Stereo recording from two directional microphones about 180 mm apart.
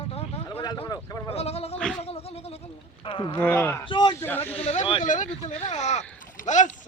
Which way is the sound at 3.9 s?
25° left (ahead or behind).